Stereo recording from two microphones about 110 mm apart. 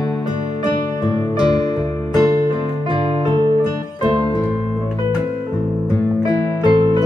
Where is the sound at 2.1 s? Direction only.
35° right (ahead or behind).